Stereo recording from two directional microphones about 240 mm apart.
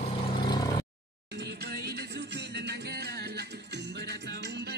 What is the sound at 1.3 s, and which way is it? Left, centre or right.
Music, right.